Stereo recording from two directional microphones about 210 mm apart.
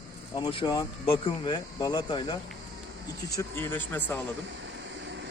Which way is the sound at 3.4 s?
10° left (ahead or behind).